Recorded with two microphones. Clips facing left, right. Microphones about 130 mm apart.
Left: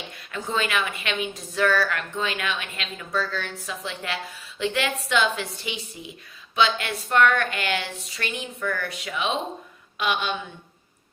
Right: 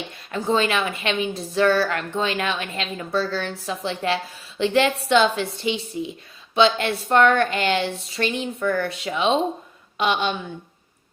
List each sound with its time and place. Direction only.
0.3 s a woman's voice: 30° right (ahead or behind)